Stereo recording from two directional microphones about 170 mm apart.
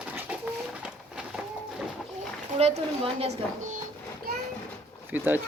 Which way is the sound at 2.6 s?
35° right (ahead or behind).